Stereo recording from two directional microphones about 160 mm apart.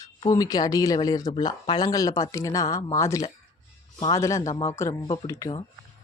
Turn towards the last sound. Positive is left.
turn(degrees=25)  # may be behind; listen again after turning